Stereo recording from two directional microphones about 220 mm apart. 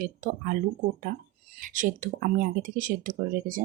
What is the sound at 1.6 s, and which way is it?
Speech, 40° right (ahead or behind).